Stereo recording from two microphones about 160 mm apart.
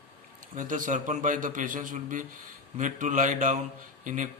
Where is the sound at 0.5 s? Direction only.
55° right (ahead or behind).